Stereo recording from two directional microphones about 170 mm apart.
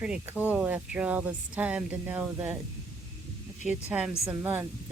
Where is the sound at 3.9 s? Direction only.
5° right (ahead or behind).